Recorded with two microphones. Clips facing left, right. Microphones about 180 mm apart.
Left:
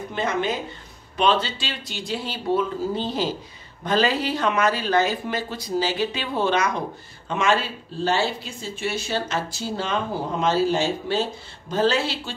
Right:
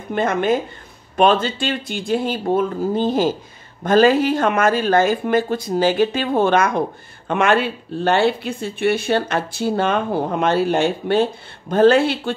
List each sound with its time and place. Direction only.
0.1 s speech: 50° right (ahead or behind)